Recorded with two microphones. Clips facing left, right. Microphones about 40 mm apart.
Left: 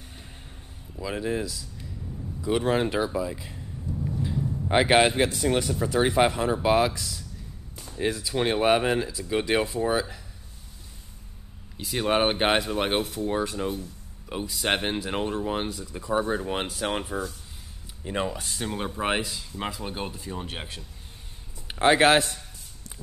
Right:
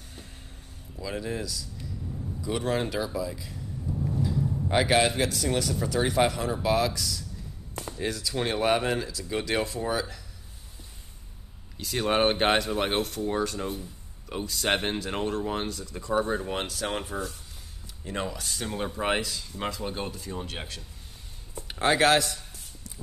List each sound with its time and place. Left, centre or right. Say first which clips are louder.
0.9 s speech: left 4 dB; centre
3.8 s a sound: even; centre
4.6 s speech: left 4 dB; left
11.7 s speech: left 1 dB; centre
18.0 s speech: left 3 dB; left
18.7 s speech: even; centre; by 22.4 s left